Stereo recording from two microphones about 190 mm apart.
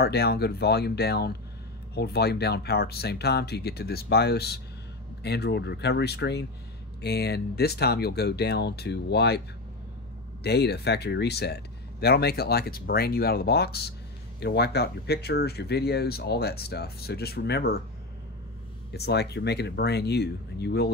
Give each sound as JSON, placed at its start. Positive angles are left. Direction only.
{"t": 0.0, "sound": "speech", "side_deg": 55}
{"t": 10.4, "sound": "speech", "side_deg": 60}
{"t": 18.9, "sound": "speech", "side_deg": 60}